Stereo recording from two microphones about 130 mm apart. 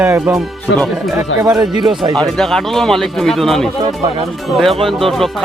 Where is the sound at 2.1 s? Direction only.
Centre (ahead or behind).